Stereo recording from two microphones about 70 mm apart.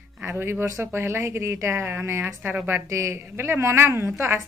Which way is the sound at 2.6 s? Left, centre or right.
Right.